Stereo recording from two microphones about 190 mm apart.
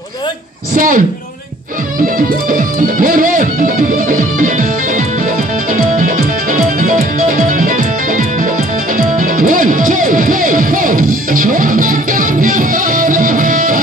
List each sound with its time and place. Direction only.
0.7 s music: 45° right (ahead or behind)
2.1 s music: 45° right (ahead or behind)